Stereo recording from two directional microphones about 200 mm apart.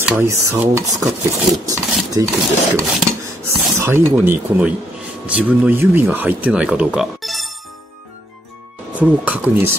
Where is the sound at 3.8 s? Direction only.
10° right (ahead or behind).